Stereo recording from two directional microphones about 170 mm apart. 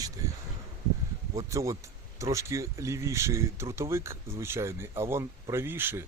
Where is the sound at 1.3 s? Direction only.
20° right (ahead or behind).